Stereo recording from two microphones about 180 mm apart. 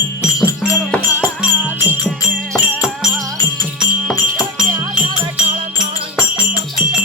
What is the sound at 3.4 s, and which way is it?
Music, 20° left (ahead or behind).